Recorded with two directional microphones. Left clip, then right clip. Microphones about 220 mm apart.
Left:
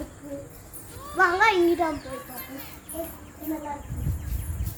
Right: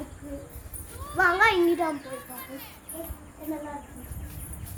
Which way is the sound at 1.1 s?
35° right (ahead or behind).